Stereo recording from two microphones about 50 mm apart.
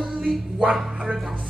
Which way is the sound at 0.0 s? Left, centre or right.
Centre.